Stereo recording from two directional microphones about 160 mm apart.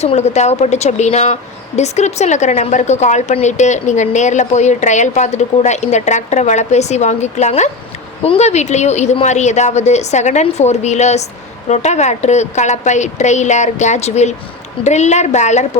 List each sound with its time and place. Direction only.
0.0 s a woman's voice: 45° left (ahead or behind)